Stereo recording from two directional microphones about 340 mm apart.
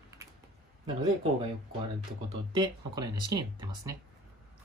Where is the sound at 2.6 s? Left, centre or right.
Centre.